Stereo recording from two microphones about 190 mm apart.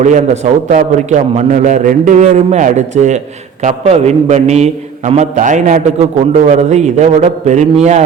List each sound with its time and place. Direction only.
0.0 s a man's voice: 40° right (ahead or behind)